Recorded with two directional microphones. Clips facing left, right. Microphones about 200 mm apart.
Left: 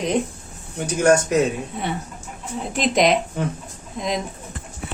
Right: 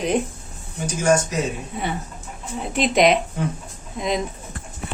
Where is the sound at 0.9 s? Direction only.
60° left (ahead or behind).